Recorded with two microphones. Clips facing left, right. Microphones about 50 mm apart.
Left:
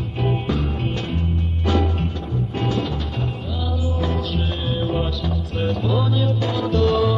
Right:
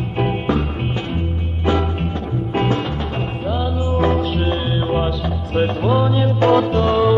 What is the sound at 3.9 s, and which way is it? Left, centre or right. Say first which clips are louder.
Music: right 9 dB; right.